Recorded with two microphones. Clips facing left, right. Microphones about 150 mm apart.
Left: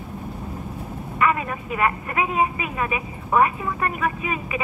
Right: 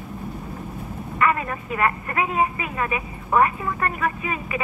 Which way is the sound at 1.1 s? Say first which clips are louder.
Even; 15° left (ahead or behind).